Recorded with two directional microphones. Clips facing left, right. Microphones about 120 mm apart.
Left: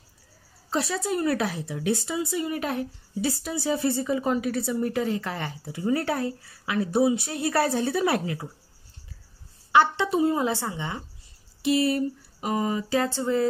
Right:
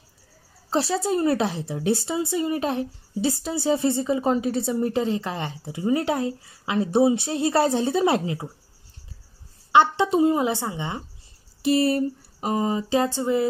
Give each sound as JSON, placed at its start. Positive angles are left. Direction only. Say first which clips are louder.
{"t": 0.7, "sound": "a woman's voice", "louder": "right 4 dB", "side_deg": -30}
{"t": 9.7, "sound": "speech", "louder": "right 3 dB", "side_deg": -20}
{"t": 11.6, "sound": "a woman's voice", "louder": "right 2 dB", "side_deg": -40}